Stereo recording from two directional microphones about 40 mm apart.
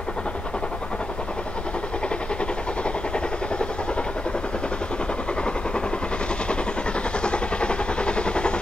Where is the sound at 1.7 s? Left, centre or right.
Left.